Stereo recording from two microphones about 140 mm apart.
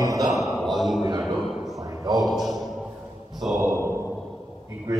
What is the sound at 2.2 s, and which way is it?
A man's voice, centre (ahead or behind).